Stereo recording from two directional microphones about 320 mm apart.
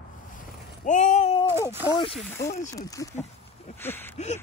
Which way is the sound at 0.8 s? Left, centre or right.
Left.